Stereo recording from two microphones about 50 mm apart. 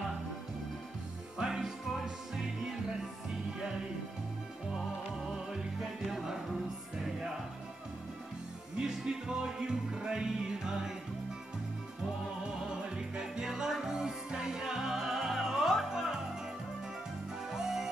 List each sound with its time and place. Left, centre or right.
1.4 s music: centre
4.7 s music: centre
8.7 s music: centre
12.6 s music: centre
17.5 s music: centre